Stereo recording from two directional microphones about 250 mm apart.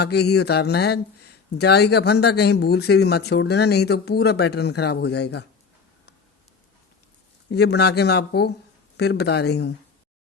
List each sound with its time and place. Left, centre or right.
0.0 s speech: left
7.5 s speech: left